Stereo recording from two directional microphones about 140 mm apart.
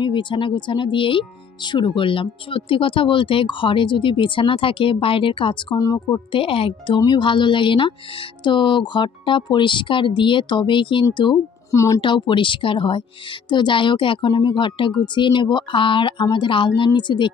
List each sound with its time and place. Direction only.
0.0 s speech: 35° left (ahead or behind)
5.8 s speech: 25° left (ahead or behind)
6.3 s speech: 40° left (ahead or behind)
11.7 s speech: 20° left (ahead or behind)
12.0 s speech: 35° left (ahead or behind)